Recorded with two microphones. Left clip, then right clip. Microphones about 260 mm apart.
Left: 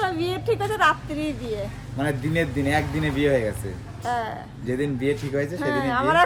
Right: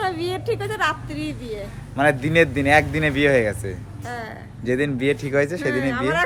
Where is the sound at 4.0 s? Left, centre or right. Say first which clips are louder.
Left 6 dB; centre.